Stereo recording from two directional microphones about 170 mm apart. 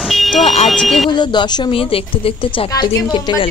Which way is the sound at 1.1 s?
25° left (ahead or behind).